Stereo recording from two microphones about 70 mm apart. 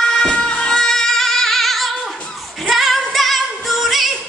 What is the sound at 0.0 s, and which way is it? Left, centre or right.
Music, centre.